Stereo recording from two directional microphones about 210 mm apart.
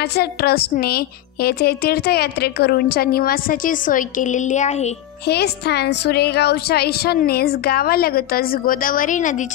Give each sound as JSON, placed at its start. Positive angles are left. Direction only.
{"t": 0.1, "sound": "a woman's voice", "side_deg": 50}
{"t": 5.3, "sound": "a woman's voice", "side_deg": 50}